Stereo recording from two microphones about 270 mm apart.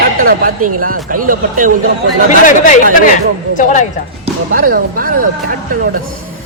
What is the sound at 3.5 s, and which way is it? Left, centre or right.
Speech, left.